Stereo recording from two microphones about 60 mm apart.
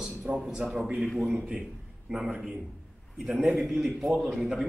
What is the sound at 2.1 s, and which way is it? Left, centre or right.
Speech, centre.